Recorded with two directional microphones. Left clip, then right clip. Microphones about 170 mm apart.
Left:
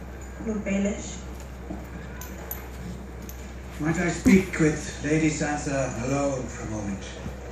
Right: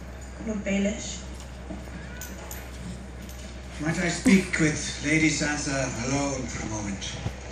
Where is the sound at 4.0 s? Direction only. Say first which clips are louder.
Left 1 dB; 60° left (ahead or behind).